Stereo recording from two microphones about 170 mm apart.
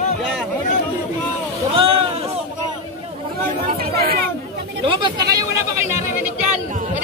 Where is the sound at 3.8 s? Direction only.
65° right (ahead or behind).